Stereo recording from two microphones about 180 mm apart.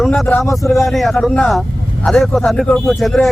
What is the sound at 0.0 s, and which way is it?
Speech, 5° left (ahead or behind).